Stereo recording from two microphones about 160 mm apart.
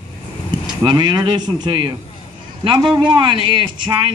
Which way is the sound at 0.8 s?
30° right (ahead or behind).